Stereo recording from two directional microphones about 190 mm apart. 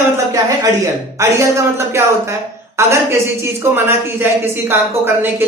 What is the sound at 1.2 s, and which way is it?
A woman's voice, 15° right (ahead or behind).